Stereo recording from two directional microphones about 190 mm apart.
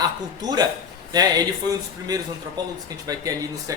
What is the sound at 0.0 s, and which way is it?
Speech, 20° right (ahead or behind).